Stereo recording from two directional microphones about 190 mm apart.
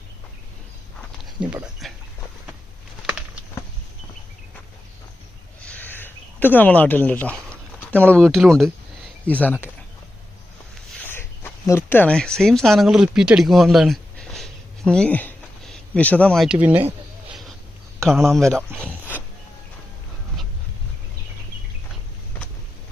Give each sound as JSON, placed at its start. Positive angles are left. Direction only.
{"t": 1.2, "sound": "speech", "side_deg": -5}
{"t": 3.1, "sound": "a sound", "side_deg": -5}
{"t": 5.6, "sound": "a sound", "side_deg": 10}
{"t": 8.2, "sound": "speech", "side_deg": 0}
{"t": 10.8, "sound": "speech", "side_deg": 10}
{"t": 18.1, "sound": "speech", "side_deg": 0}